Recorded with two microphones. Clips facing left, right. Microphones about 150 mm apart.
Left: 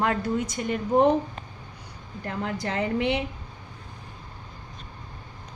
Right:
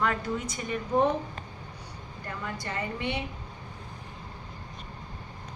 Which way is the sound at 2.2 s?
85° left.